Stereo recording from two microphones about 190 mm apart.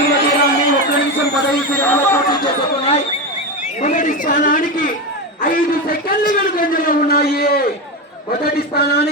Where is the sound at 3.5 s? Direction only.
40° left (ahead or behind).